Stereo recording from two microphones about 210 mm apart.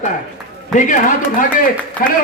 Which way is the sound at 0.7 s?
35° left (ahead or behind).